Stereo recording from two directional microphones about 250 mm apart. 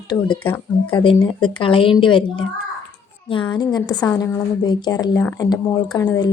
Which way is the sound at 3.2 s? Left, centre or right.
Centre.